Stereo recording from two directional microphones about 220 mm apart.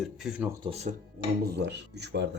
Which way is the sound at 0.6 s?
30° right (ahead or behind).